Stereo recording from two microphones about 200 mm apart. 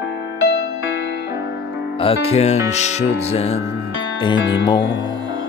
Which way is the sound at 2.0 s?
30° left (ahead or behind).